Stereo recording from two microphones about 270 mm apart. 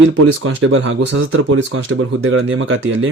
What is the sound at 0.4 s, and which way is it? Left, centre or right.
Speech, right.